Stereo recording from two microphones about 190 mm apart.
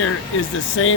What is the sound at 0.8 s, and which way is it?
Speech, 90° left.